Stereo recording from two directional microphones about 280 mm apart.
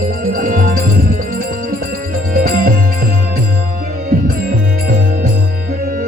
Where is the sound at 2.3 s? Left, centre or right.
Right.